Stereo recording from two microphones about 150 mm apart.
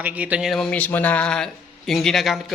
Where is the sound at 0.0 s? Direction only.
10° right (ahead or behind).